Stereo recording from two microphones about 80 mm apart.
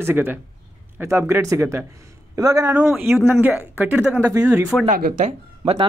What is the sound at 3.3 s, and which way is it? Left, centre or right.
Speech, right.